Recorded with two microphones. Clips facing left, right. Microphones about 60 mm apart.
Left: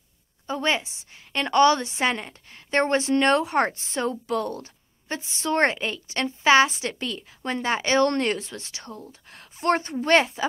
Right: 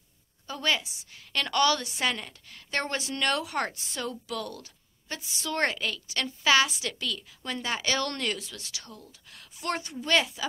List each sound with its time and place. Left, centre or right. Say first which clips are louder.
0.5 s a woman's voice: left 4 dB; left